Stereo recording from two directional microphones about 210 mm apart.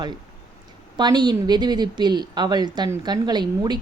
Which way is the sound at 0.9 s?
20° right (ahead or behind).